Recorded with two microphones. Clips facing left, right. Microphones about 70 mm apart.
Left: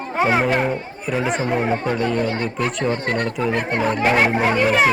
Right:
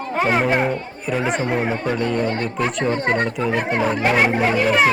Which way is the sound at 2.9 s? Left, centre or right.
Centre.